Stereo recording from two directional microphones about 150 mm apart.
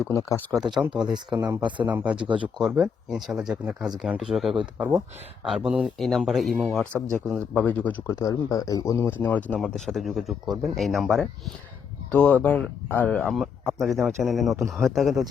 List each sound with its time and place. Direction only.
0.1 s speech: 20° left (ahead or behind)
0.5 s speech: centre (ahead or behind)
1.1 s speech: 30° right (ahead or behind)
1.9 s speech: 10° right (ahead or behind)
2.1 s speech: 35° right (ahead or behind)
2.6 s speech: centre (ahead or behind)
8.2 s speech: 25° left (ahead or behind); by 15.2 s centre (ahead or behind)